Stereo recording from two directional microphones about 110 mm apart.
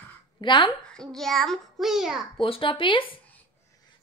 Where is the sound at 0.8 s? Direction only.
5° left (ahead or behind).